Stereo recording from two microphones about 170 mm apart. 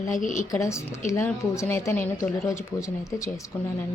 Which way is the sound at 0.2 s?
50° left (ahead or behind).